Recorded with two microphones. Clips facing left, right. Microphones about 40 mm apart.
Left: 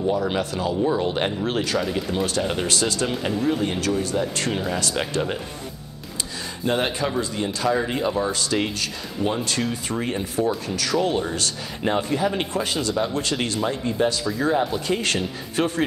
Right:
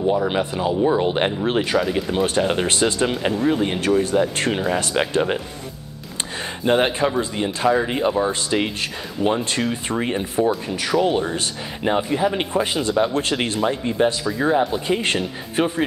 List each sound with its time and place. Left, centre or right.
0.0 s speech: centre
1.8 s speech: centre
2.2 s speech: right
6.6 s speech: right
13.1 s speech: right
14.3 s speech: centre